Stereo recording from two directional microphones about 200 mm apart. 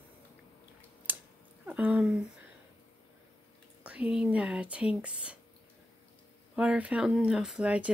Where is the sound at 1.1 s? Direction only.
10° right (ahead or behind).